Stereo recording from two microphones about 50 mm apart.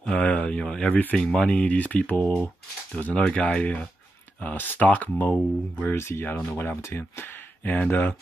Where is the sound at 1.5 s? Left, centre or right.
Left.